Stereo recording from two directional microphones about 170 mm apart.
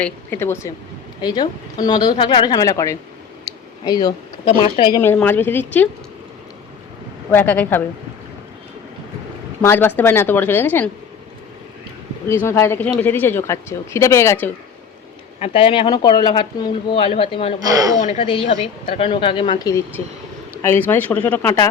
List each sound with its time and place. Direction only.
0.0 s a woman's voice: 15° left (ahead or behind)
5.0 s a woman's voice: 10° left (ahead or behind)
7.3 s a woman's voice: 10° left (ahead or behind)
9.6 s a woman's voice: 10° left (ahead or behind)
12.3 s a woman's voice: 15° left (ahead or behind)
15.4 s speech: 35° left (ahead or behind)
17.9 s a woman's voice: 45° left (ahead or behind)
18.3 s a woman's voice: 30° left (ahead or behind); by 21.6 s 15° left (ahead or behind)